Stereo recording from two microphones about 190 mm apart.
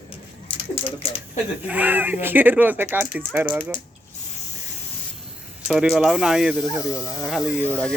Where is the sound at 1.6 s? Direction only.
10° right (ahead or behind).